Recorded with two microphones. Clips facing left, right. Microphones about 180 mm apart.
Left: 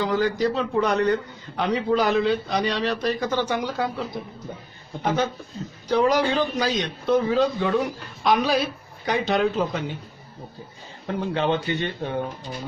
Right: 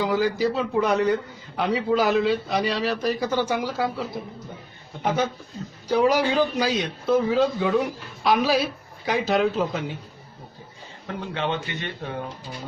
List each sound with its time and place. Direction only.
0.0 s a man's voice: 10° right (ahead or behind)
5.0 s a man's voice: 10° right (ahead or behind)
11.0 s a man's voice: 35° left (ahead or behind)